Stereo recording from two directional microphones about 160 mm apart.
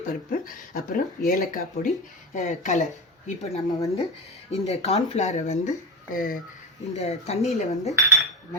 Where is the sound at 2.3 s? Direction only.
50° left (ahead or behind).